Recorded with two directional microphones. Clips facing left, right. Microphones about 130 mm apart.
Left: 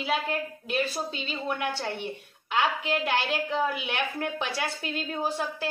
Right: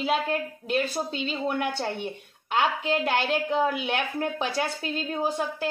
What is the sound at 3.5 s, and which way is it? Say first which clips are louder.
A woman's voice: right 4 dB; 35° right (ahead or behind).